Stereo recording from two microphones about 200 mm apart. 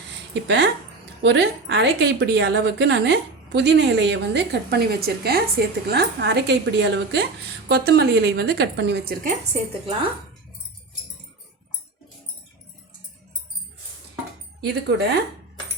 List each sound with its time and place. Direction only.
0.4 s a woman's voice: 60° right (ahead or behind)
9.2 s speech: 30° right (ahead or behind)
14.7 s a woman's voice: 55° right (ahead or behind)